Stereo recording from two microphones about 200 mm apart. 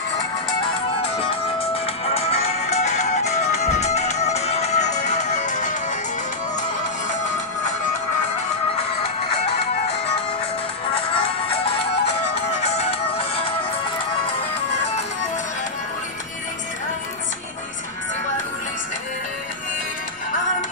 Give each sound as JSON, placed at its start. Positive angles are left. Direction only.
{"t": 1.2, "sound": "music", "side_deg": 30}
{"t": 11.1, "sound": "music", "side_deg": 25}